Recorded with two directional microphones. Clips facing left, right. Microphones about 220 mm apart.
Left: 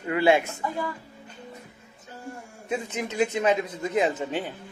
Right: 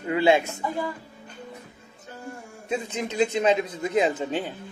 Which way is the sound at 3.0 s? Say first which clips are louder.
Right 2 dB; 25° right (ahead or behind).